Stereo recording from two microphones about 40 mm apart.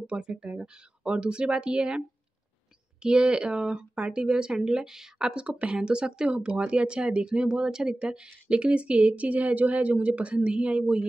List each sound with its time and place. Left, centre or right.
0.0 s speech: right
5.3 s speech: right